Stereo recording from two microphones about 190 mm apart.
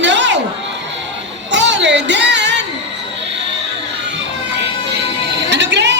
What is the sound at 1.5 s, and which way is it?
Music, 70° right (ahead or behind).